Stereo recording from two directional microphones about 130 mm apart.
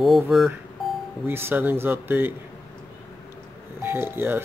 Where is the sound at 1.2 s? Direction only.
15° right (ahead or behind).